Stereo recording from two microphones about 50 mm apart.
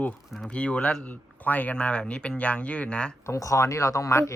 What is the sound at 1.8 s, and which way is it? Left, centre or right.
Speech, left.